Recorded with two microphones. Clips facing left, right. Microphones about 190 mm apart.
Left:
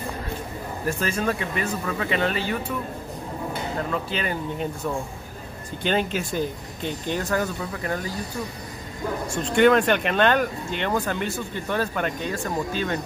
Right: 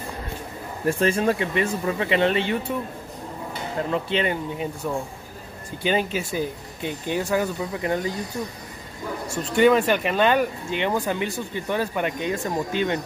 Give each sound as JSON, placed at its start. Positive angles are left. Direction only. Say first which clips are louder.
{"t": 0.8, "sound": "speech", "louder": "right 5 dB", "side_deg": -30}
{"t": 3.9, "sound": "speech", "louder": "right 4 dB", "side_deg": -25}
{"t": 5.8, "sound": "speech", "louder": "right 1 dB", "side_deg": -10}
{"t": 9.3, "sound": "speech", "louder": "even", "side_deg": -5}